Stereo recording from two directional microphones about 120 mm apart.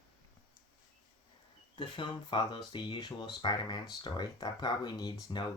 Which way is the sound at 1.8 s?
40° left (ahead or behind).